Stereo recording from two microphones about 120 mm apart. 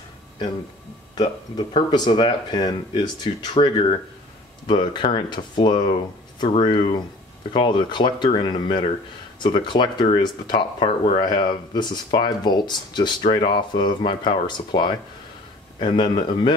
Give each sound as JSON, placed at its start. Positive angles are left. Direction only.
{"t": 1.1, "sound": "speech", "side_deg": 45}
{"t": 11.2, "sound": "speech", "side_deg": 35}